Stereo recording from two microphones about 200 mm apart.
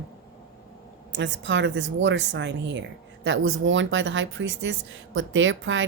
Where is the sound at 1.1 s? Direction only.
65° right (ahead or behind).